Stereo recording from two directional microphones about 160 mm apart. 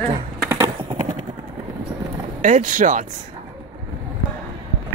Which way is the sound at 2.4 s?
55° right (ahead or behind).